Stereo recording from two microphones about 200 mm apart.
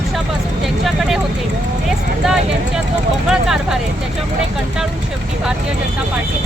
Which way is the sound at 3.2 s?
Centre (ahead or behind).